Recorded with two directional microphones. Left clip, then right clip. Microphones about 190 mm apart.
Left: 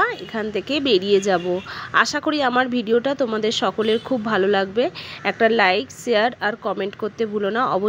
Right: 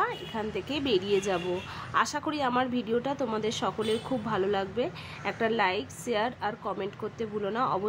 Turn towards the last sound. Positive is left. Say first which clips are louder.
# left 9 dB
turn(degrees=30)  # may be behind; listen again after turning